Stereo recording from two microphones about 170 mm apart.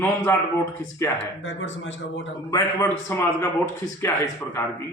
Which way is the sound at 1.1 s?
90° left.